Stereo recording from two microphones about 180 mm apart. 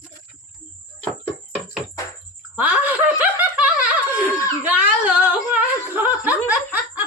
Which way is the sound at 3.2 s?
10° right (ahead or behind).